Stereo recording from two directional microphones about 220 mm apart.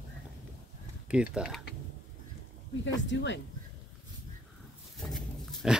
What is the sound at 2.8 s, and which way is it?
Speech, 55° left (ahead or behind).